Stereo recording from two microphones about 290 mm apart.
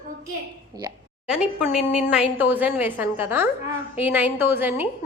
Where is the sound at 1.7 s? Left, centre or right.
Centre.